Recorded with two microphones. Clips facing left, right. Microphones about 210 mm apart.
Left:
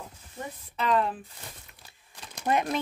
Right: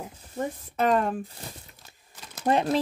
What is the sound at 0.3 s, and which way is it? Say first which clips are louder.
Speech: right 9 dB; 45° right (ahead or behind).